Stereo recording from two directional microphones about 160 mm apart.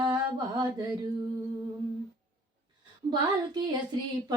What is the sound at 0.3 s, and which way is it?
Mantra, 25° right (ahead or behind).